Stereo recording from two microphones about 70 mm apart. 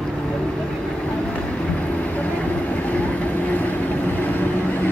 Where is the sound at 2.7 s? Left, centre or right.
Centre.